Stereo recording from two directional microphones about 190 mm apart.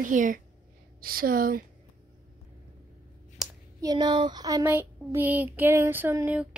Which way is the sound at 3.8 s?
20° right (ahead or behind).